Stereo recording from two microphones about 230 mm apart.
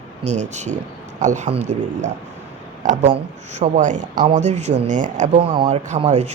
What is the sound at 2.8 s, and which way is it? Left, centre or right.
Speech, right.